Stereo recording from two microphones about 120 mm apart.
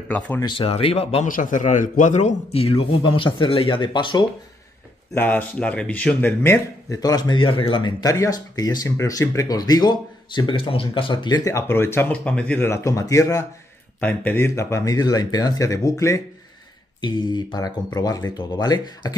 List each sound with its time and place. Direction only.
0.4 s a man's voice: 45° left (ahead or behind)
1.2 s a man's voice: 90° left; by 4.2 s 40° left (ahead or behind)
5.1 s a man's voice: 15° left (ahead or behind)
7.0 s speech: 35° left (ahead or behind)
8.1 s speech: 30° left (ahead or behind)
11.5 s a man's voice: 20° left (ahead or behind)
12.6 s speech: 25° left (ahead or behind)
13.9 s speech: 15° left (ahead or behind)
17.0 s speech: 40° left (ahead or behind)